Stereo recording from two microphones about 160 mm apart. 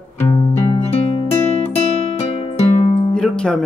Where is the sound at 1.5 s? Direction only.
40° left (ahead or behind).